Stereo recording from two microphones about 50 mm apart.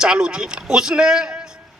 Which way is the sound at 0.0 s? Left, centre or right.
Centre.